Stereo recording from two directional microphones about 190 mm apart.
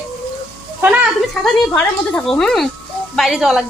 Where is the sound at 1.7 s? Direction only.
5° left (ahead or behind).